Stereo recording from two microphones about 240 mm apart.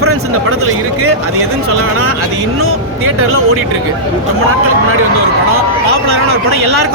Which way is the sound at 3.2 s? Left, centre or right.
Right.